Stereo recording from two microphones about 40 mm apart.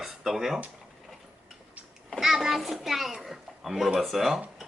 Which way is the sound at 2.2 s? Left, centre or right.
Centre.